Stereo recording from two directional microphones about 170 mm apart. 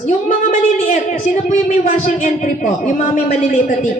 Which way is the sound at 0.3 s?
50° left (ahead or behind).